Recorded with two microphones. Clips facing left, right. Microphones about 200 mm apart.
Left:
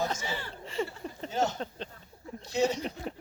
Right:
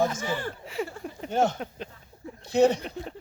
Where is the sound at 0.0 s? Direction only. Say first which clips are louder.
Right 6 dB; 50° right (ahead or behind).